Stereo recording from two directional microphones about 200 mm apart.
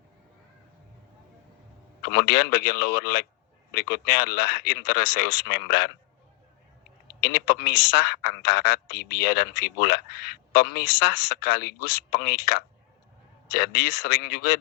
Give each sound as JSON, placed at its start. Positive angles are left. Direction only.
{"t": 2.0, "sound": "a man's voice", "side_deg": 50}
{"t": 7.2, "sound": "a man's voice", "side_deg": 50}